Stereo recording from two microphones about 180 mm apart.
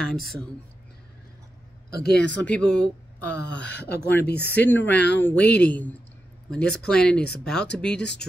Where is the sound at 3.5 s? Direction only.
75° left (ahead or behind).